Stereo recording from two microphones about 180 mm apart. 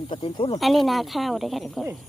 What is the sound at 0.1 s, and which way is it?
Speech, 25° left (ahead or behind).